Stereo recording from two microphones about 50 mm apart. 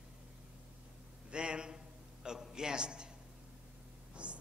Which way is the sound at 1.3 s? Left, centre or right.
Centre.